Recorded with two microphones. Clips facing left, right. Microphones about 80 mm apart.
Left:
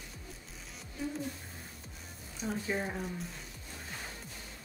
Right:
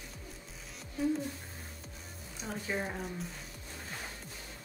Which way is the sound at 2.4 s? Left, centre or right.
Centre.